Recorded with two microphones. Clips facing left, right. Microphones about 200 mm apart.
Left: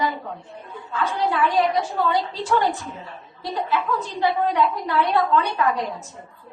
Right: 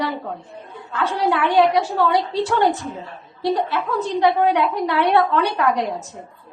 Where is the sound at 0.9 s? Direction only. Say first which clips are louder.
Right 3 dB; 75° right (ahead or behind).